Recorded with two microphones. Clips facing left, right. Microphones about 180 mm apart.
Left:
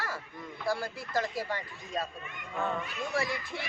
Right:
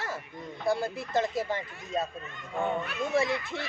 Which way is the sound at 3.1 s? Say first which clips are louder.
Right 6 dB; 25° right (ahead or behind).